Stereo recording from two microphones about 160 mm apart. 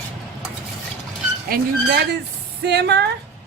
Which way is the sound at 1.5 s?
90° right.